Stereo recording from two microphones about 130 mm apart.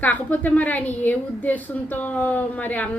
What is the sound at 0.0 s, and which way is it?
A woman's voice, 10° left (ahead or behind).